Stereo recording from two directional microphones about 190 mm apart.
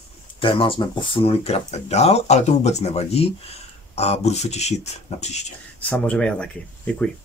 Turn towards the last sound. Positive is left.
turn(degrees=5)  # may be behind; listen again after turning